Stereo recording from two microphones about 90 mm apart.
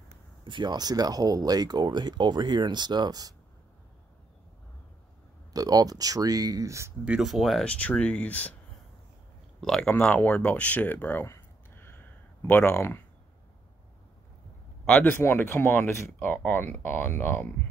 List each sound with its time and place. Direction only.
0.5 s speech: 55° right (ahead or behind)
5.5 s speech: 45° right (ahead or behind)
7.1 s speech: 5° right (ahead or behind)
7.6 s speech: 10° left (ahead or behind)
9.6 s speech: 5° left (ahead or behind)
11.2 s a sound: 25° left (ahead or behind)
12.7 s speech: 25° left (ahead or behind)
14.9 s speech: 20° left (ahead or behind)